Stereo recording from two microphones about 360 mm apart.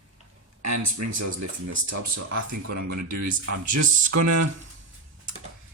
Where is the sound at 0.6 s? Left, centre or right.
Right.